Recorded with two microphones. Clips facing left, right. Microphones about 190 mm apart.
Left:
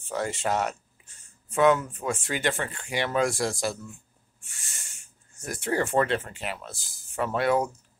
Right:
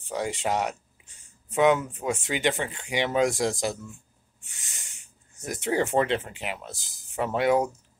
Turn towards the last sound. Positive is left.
turn(degrees=-15)  # may be behind; listen again after turning